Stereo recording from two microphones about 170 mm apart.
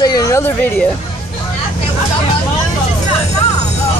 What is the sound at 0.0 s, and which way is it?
Speech, 20° left (ahead or behind).